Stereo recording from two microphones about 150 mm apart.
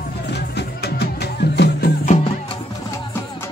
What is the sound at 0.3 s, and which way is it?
Music, 90° left.